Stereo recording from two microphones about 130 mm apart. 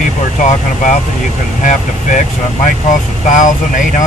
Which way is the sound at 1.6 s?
70° left (ahead or behind).